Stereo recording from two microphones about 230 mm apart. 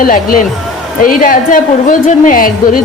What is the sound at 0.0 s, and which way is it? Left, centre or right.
A woman's voice, left.